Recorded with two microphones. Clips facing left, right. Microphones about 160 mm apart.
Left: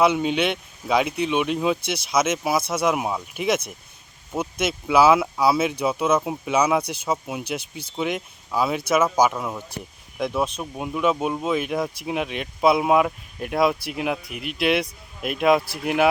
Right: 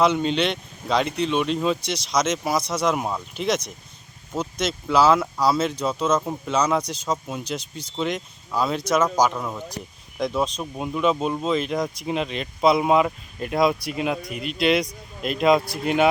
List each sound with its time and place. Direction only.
0.0 s speech: 10° left (ahead or behind)
14.3 s speech: 65° left (ahead or behind)
14.6 s speech: 5° left (ahead or behind)